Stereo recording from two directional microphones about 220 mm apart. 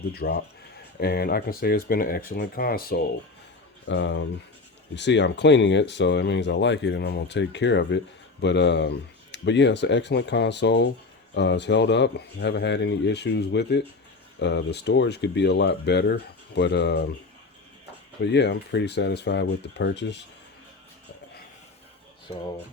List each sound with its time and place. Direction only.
0.1 s speech: 45° left (ahead or behind)
3.8 s speech: 55° left (ahead or behind)
18.3 s speech: 50° left (ahead or behind)